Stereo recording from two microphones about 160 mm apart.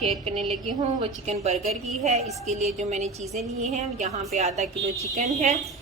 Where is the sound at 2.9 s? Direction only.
45° right (ahead or behind).